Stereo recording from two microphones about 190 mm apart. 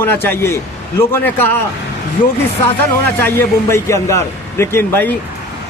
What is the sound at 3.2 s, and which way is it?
A man's voice, 10° left (ahead or behind).